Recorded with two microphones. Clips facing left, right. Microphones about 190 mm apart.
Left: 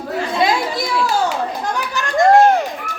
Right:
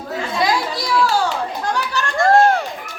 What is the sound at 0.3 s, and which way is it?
Chatter, 25° left (ahead or behind).